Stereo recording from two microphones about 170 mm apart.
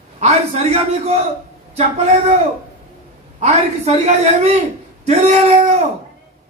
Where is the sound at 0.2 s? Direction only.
40° right (ahead or behind).